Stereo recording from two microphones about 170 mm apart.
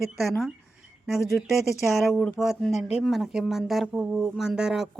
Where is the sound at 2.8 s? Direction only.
35° left (ahead or behind).